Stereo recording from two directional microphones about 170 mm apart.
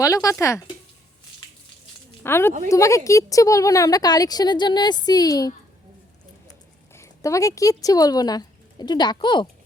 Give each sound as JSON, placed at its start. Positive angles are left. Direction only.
{"t": 0.0, "sound": "a woman's voice", "side_deg": 20}
{"t": 2.2, "sound": "a woman's voice", "side_deg": 15}
{"t": 6.9, "sound": "speech", "side_deg": 15}